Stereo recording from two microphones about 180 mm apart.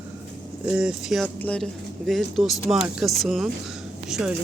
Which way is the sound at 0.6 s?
5° right (ahead or behind).